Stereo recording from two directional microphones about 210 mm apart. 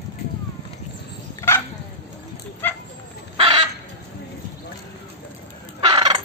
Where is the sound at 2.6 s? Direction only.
10° left (ahead or behind).